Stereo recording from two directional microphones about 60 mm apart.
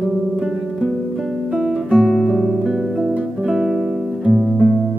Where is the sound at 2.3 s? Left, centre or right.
Centre.